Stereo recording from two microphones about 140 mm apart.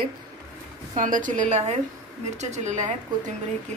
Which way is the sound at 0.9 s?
70° right (ahead or behind).